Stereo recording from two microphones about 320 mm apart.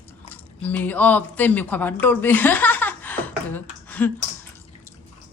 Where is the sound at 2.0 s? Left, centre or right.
Centre.